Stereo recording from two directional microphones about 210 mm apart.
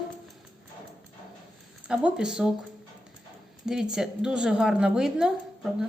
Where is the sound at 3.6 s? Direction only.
5° right (ahead or behind).